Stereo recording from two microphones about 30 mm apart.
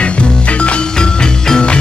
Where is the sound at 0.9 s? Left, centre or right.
Left.